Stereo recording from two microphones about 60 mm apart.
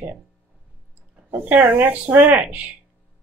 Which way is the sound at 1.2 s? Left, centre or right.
Right.